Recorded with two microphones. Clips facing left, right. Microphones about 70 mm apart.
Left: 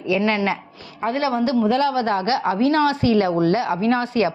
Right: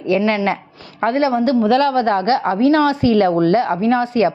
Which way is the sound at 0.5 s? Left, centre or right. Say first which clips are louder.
Right 3 dB; right.